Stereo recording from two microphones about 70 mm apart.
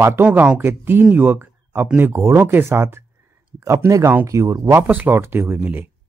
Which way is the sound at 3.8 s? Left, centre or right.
Right.